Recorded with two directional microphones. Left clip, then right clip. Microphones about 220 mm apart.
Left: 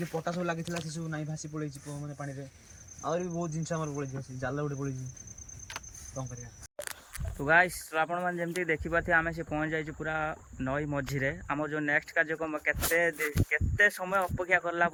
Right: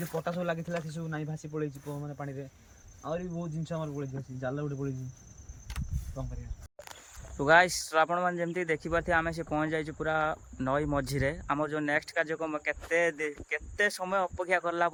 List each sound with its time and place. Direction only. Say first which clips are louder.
0.1 s speech: right 2 dB; 10° right (ahead or behind)
7.3 s speech: right 2 dB; 15° right (ahead or behind)